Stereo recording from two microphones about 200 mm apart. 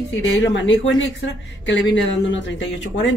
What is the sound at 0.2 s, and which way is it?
Speech, 65° left (ahead or behind).